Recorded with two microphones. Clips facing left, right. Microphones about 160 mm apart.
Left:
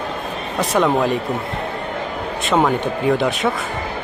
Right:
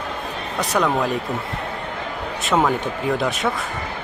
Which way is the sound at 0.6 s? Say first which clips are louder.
Left 3 dB; centre (ahead or behind).